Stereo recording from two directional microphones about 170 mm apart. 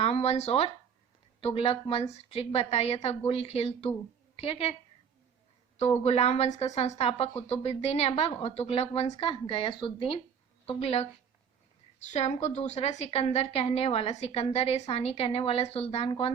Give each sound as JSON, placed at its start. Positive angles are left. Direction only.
{"t": 0.0, "sound": "a woman's voice", "side_deg": 40}